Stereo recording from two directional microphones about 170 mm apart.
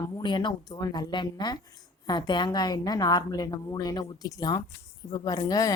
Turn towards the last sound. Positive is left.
turn(degrees=20)  # may be behind; listen again after turning